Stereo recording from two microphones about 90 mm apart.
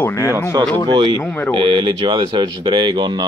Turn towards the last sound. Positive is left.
turn(degrees=-60)  # may be behind; listen again after turning